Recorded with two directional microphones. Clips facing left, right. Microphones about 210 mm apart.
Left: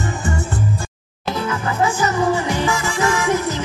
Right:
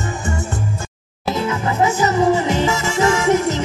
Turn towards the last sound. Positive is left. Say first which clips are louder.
# right 3 dB
turn(degrees=-25)  # may be behind; listen again after turning